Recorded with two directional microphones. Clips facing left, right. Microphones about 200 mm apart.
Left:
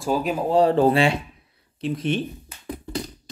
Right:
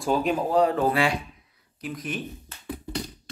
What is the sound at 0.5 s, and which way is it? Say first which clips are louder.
Speech: left 6 dB; 30° left (ahead or behind).